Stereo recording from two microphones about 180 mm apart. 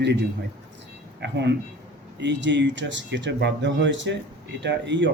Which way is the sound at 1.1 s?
70° right (ahead or behind).